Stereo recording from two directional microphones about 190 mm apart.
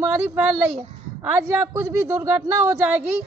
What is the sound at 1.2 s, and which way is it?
Speech, 10° right (ahead or behind).